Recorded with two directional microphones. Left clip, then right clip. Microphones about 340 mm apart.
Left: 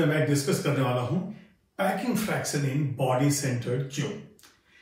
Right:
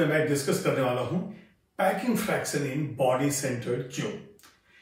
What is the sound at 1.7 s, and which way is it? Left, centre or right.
A man's voice, centre.